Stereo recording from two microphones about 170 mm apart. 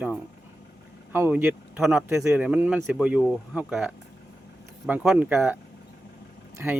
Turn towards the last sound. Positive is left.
turn(degrees=-10)  # may be behind; listen again after turning